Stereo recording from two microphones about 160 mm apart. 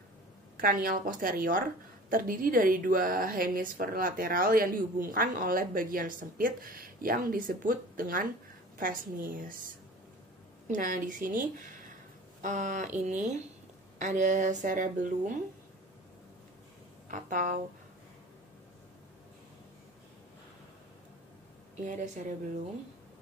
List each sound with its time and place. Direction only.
0.6 s speech: 60° right (ahead or behind)
10.7 s speech: 60° right (ahead or behind)
17.1 s speech: 55° right (ahead or behind)
21.8 s speech: 50° right (ahead or behind)